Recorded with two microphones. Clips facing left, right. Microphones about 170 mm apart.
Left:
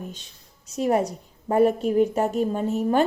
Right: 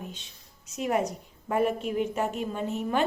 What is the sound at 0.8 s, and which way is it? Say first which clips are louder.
A woman's voice: left 5 dB; 35° left (ahead or behind).